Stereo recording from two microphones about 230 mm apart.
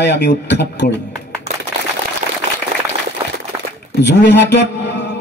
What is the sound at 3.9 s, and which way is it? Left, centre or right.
Speech, left.